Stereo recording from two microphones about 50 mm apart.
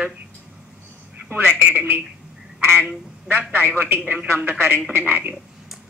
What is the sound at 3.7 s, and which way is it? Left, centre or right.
Speech, right.